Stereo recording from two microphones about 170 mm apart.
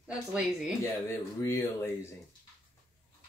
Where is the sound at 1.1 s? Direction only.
15° left (ahead or behind).